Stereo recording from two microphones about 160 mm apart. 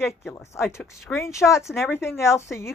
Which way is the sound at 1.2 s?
20° left (ahead or behind).